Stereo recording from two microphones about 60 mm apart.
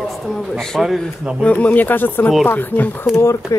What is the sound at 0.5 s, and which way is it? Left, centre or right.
Speech, centre.